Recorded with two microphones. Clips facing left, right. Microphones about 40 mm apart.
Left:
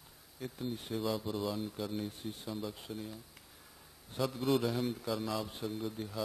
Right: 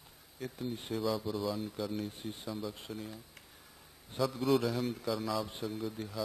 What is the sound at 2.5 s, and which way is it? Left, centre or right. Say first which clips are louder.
Speech: right 1 dB; centre.